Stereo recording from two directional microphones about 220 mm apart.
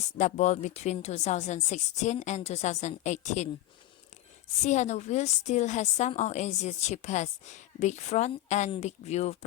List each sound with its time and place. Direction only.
0.2 s a woman's voice: 35° left (ahead or behind)
4.6 s a woman's voice: 30° left (ahead or behind)